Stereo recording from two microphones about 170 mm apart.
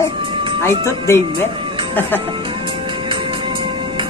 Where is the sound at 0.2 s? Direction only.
30° right (ahead or behind).